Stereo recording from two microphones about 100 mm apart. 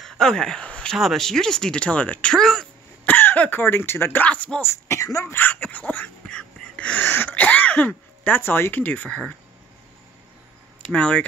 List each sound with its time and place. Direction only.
0.0 s a sound: 5° left (ahead or behind)
0.9 s speech: centre (ahead or behind)
3.1 s speech: 20° left (ahead or behind)
10.9 s speech: 10° left (ahead or behind)